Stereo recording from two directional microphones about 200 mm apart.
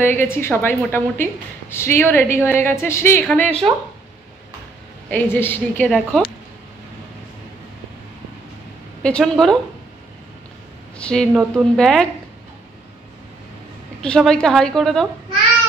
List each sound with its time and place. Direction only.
0.0 s a woman's voice: 10° left (ahead or behind)
5.1 s a woman's voice: 10° left (ahead or behind)
9.0 s speech: 5° left (ahead or behind)
11.0 s speech: 5° left (ahead or behind)
14.0 s speech: 5° left (ahead or behind)